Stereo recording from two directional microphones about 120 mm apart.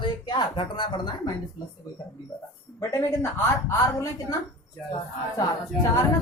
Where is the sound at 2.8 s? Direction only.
25° left (ahead or behind).